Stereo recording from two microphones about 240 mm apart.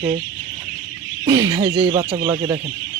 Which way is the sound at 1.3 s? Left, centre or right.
Centre.